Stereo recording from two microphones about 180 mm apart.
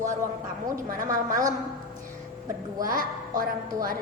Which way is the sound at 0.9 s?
50° right (ahead or behind).